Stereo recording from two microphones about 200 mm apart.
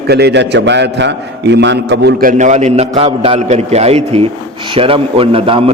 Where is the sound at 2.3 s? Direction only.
35° right (ahead or behind).